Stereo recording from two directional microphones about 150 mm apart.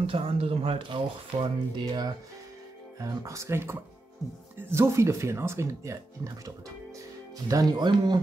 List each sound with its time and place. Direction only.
0.0 s speech: 40° right (ahead or behind)